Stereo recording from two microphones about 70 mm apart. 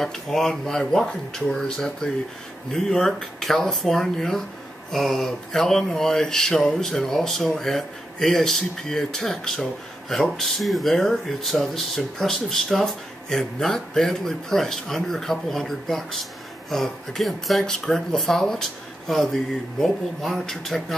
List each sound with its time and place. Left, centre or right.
0.0 s speech: centre